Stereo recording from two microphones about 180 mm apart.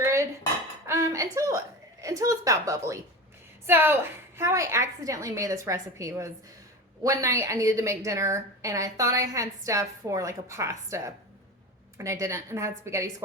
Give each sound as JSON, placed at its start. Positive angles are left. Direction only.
{"t": 0.0, "sound": "dishes", "side_deg": -15}
{"t": 0.9, "sound": "a sound", "side_deg": -15}
{"t": 3.7, "sound": "a woman's voice", "side_deg": -10}